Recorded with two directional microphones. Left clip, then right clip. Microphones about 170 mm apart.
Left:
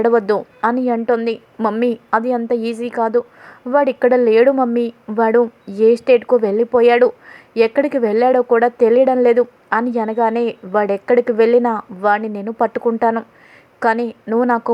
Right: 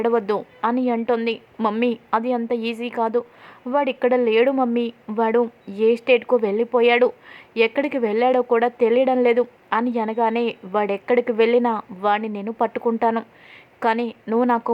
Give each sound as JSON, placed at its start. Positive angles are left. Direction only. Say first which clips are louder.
{"t": 0.0, "sound": "a woman's voice", "louder": "left 6 dB", "side_deg": 20}
{"t": 1.5, "sound": "a woman's voice", "louder": "left 3 dB", "side_deg": 5}
{"t": 1.8, "sound": "a woman's voice", "louder": "left 6 dB", "side_deg": 20}